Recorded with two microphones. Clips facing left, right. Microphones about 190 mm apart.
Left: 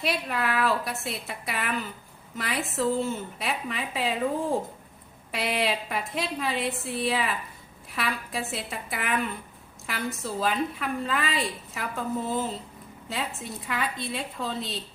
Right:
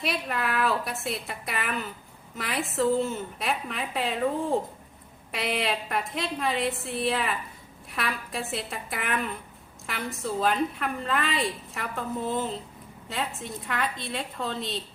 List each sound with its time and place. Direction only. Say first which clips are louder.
0.0 s a woman's voice: left 1 dB; centre (ahead or behind)
5.3 s a woman's voice: left 1 dB; centre (ahead or behind)